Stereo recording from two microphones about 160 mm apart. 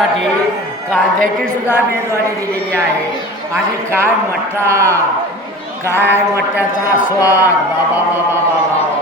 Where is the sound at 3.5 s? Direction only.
15° right (ahead or behind).